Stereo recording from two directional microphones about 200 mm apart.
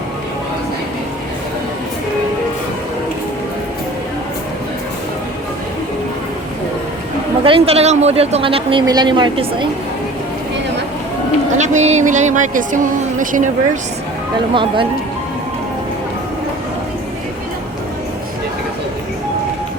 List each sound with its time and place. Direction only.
7.4 s speech: 25° right (ahead or behind)
11.5 s speech: 35° right (ahead or behind)
14.5 s speech: 25° right (ahead or behind)